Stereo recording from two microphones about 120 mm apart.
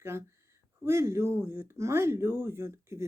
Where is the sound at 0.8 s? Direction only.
20° right (ahead or behind).